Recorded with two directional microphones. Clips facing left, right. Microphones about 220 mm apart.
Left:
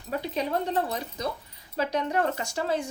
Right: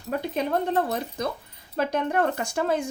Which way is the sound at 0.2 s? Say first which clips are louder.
Right 2 dB; 50° right (ahead or behind).